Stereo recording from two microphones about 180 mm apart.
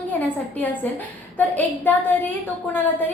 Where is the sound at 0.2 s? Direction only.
10° left (ahead or behind).